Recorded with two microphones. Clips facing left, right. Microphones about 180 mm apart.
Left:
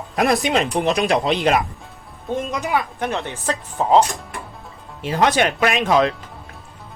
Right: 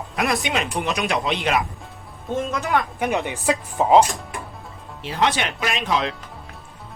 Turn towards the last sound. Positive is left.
turn(degrees=50)  # may be behind; listen again after turning